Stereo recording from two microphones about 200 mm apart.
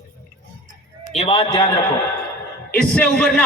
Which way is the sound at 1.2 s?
25° left (ahead or behind).